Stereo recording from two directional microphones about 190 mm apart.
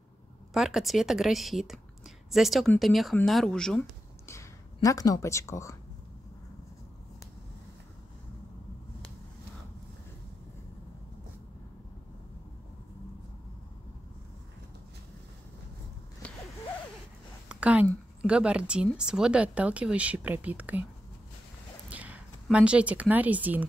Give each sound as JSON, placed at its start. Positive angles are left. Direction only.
{"t": 0.5, "sound": "speech", "side_deg": 0}
{"t": 4.7, "sound": "speech", "side_deg": 20}
{"t": 16.2, "sound": "a sound", "side_deg": 5}
{"t": 17.5, "sound": "a sound", "side_deg": -5}
{"t": 18.2, "sound": "speech", "side_deg": -5}
{"t": 21.8, "sound": "speech", "side_deg": -5}